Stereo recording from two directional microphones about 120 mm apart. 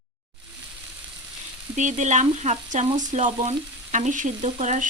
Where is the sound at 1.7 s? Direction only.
90° right; by 2.8 s 70° right (ahead or behind).